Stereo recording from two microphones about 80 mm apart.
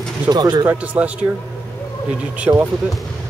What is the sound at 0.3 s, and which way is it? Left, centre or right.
Speech, right.